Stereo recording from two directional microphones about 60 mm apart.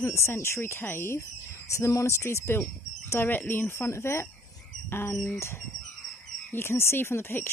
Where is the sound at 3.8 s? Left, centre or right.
Left.